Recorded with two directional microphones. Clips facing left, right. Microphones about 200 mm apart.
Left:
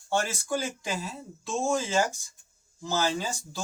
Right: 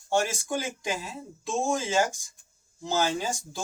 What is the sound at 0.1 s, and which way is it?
Speech, 15° right (ahead or behind).